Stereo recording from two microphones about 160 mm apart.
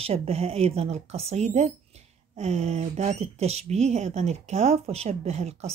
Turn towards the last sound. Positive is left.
turn(degrees=-40)  # may be behind; listen again after turning